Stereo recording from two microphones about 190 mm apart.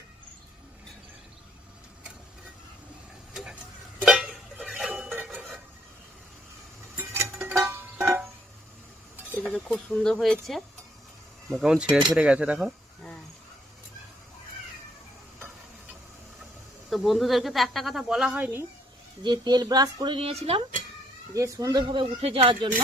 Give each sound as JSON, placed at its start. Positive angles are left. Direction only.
{"t": 4.0, "sound": "a sound", "side_deg": 0}
{"t": 5.3, "sound": "dishes", "side_deg": 0}
{"t": 6.9, "sound": "music", "side_deg": -15}
{"t": 9.4, "sound": "speech", "side_deg": 5}
{"t": 16.9, "sound": "speech", "side_deg": 0}
{"t": 19.2, "sound": "speech", "side_deg": -20}
{"t": 21.3, "sound": "speech", "side_deg": -15}